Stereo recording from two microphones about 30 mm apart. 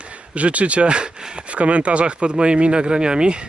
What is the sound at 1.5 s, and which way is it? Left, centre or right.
Speech, right.